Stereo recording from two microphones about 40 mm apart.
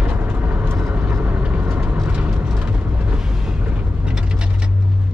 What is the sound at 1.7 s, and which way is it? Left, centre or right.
Vehicle, right.